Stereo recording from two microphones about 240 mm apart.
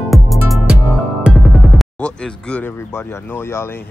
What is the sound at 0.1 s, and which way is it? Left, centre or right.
Music, centre.